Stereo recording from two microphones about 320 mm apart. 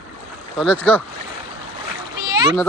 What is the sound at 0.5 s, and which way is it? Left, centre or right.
Speech, centre.